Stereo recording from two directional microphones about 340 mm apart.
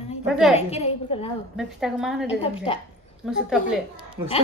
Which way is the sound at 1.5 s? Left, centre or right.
Centre.